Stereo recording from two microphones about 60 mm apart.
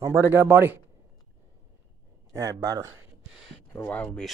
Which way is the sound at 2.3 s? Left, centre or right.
Right.